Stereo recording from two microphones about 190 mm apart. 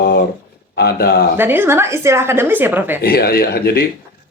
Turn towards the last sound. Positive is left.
turn(degrees=55)  # may be behind; listen again after turning